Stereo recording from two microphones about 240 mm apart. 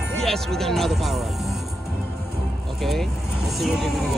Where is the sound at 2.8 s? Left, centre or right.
Centre.